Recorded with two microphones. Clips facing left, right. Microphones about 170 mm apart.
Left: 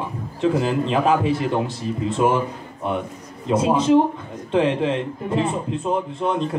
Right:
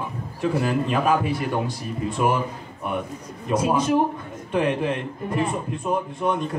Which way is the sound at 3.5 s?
25° left (ahead or behind).